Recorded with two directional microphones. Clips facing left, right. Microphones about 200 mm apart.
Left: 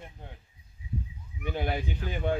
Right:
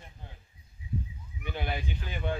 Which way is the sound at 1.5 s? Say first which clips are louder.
Left 4 dB; 45° left (ahead or behind).